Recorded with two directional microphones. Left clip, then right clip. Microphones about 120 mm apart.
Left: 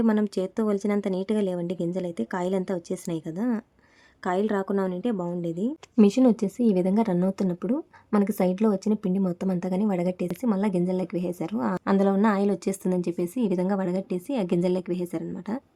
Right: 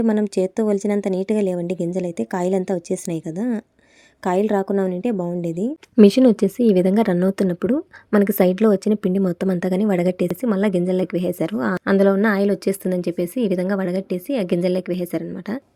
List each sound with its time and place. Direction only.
0.1 s a woman's voice: 15° right (ahead or behind)
6.0 s a woman's voice: 35° right (ahead or behind)